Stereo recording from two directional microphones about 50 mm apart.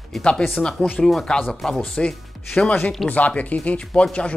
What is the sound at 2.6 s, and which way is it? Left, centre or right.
Speech, left.